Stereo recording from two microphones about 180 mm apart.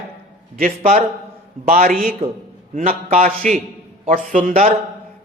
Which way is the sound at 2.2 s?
30° right (ahead or behind).